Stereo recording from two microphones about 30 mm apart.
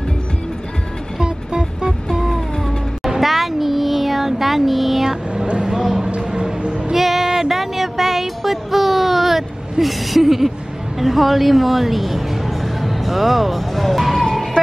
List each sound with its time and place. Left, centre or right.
1.2 s music: right
3.2 s child singing: centre
5.6 s a sound: centre
6.9 s music: centre
7.2 s a sound: centre
11.0 s a woman's voice: centre